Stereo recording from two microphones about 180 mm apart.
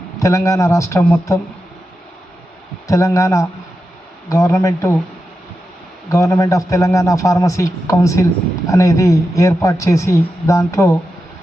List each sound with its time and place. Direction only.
0.2 s a man's voice: 15° left (ahead or behind)
2.8 s a man's voice: 15° left (ahead or behind)
6.1 s a man's voice: 15° left (ahead or behind)